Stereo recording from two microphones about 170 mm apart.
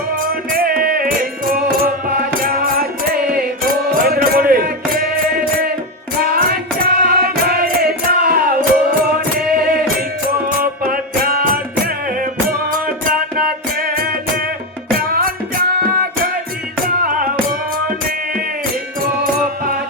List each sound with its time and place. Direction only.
0.2 s music: 60° right (ahead or behind)
6.3 s music: 60° right (ahead or behind)
16.8 s music: 55° right (ahead or behind)